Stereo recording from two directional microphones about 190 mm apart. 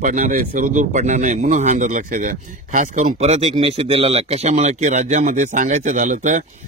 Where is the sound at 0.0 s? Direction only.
40° right (ahead or behind).